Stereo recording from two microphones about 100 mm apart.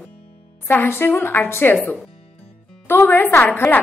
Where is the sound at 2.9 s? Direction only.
20° left (ahead or behind).